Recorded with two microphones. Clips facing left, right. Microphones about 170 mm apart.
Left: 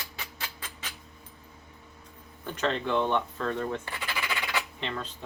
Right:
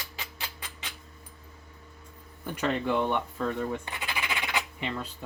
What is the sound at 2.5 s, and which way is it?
Speech, 10° right (ahead or behind).